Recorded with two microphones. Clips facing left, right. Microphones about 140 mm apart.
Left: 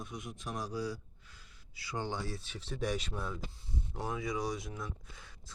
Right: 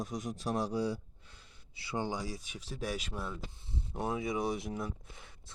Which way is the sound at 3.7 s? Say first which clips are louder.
Right 3 dB; 25° right (ahead or behind).